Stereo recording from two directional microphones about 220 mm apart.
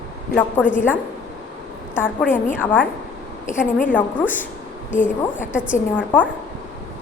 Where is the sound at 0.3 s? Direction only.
10° left (ahead or behind).